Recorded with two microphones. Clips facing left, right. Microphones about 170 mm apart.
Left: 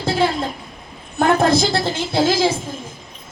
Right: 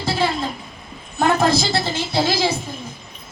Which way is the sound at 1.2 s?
55° left (ahead or behind).